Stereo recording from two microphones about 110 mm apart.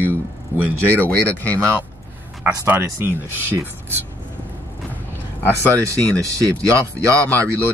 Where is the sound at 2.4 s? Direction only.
15° right (ahead or behind).